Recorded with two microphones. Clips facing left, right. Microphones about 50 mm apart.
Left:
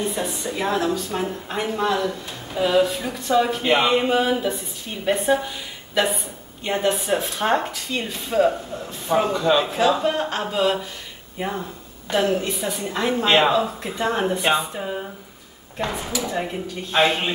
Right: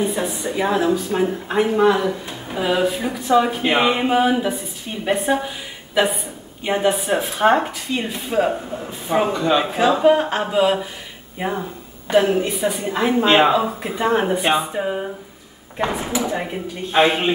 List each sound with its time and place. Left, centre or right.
0.0 s a woman's voice: centre
6.7 s speech: centre